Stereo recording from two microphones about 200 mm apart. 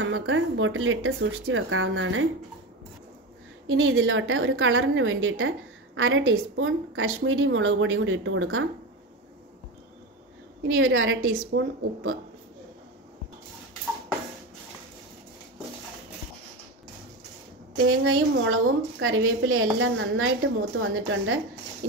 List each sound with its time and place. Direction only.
0.0 s a woman's voice: 75° right (ahead or behind)
3.7 s a woman's voice: 85° right
10.7 s a woman's voice: 80° right
17.8 s a woman's voice: 85° right